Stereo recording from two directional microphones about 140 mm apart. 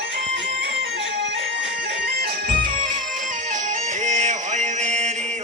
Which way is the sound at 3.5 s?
65° right (ahead or behind).